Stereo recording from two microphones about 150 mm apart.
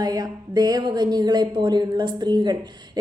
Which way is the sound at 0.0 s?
25° right (ahead or behind).